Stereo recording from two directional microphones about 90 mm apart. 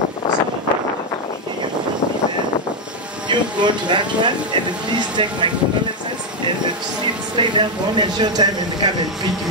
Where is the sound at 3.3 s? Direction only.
60° right (ahead or behind).